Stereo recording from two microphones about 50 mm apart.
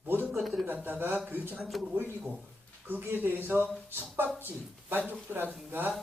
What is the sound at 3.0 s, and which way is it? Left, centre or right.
Speech, right.